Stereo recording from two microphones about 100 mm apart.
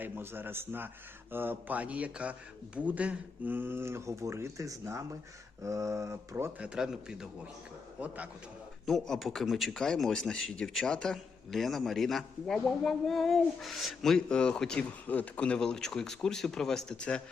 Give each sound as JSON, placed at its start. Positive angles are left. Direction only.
{"t": 0.0, "sound": "a man's voice", "side_deg": -20}
{"t": 6.6, "sound": "a man's voice", "side_deg": -5}
{"t": 8.9, "sound": "a man's voice", "side_deg": 0}